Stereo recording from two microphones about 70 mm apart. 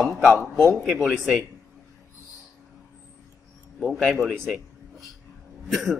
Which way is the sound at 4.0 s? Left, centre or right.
Centre.